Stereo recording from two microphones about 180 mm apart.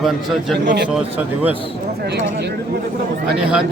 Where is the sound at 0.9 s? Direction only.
5° right (ahead or behind).